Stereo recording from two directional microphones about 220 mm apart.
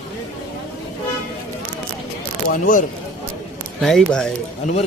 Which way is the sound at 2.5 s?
40° left (ahead or behind).